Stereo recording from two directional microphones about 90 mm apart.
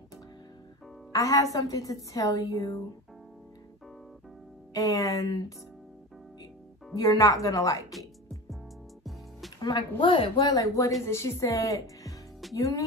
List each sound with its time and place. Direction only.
1.1 s speech: 40° left (ahead or behind)
4.7 s speech: 40° left (ahead or behind)
7.0 s speech: 40° left (ahead or behind)
9.6 s speech: 55° left (ahead or behind); by 10.4 s 80° left
10.4 s a woman's voice: 40° left (ahead or behind)